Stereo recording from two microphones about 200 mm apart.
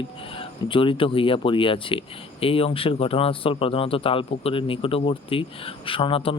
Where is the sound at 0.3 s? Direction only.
25° left (ahead or behind).